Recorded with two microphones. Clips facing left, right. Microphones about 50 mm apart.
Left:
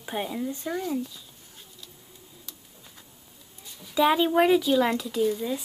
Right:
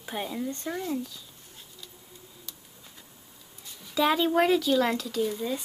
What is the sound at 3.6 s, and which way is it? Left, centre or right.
Speech, centre.